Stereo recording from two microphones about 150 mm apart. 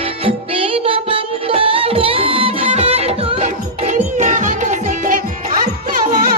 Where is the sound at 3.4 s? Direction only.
55° right (ahead or behind).